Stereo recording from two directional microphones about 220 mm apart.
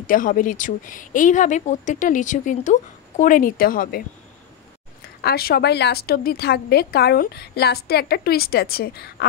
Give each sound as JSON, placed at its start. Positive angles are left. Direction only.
{"t": 0.0, "sound": "speech", "side_deg": 40}
{"t": 5.2, "sound": "a woman's voice", "side_deg": 45}